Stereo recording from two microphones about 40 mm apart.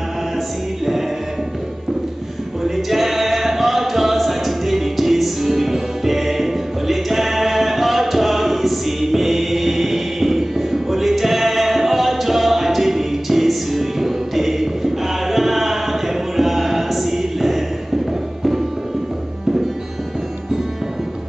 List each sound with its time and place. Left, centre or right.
2.6 s singing: centre